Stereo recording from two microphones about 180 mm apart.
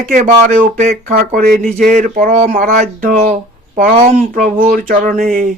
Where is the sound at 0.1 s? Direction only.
45° right (ahead or behind).